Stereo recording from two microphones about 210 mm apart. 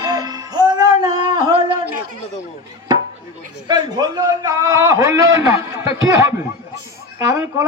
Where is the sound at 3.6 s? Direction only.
20° right (ahead or behind).